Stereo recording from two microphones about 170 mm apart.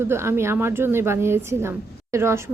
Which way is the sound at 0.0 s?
15° right (ahead or behind).